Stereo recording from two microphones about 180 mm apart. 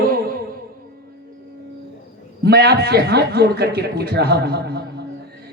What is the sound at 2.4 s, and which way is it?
A man's voice, 65° right (ahead or behind).